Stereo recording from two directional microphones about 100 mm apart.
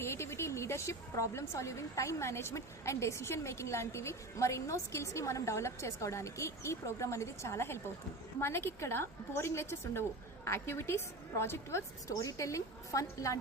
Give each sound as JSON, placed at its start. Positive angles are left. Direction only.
{"t": 0.0, "sound": "a woman's voice", "side_deg": 25}